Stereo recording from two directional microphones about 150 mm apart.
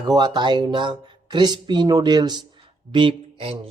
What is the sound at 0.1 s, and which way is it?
Speech, 30° right (ahead or behind).